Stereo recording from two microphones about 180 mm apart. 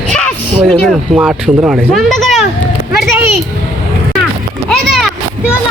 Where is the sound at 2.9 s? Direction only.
10° right (ahead or behind).